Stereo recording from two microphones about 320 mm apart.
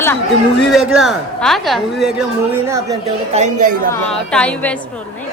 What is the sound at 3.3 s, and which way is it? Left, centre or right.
Speech, right.